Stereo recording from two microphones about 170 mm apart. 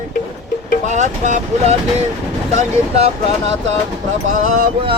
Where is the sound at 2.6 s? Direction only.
40° right (ahead or behind).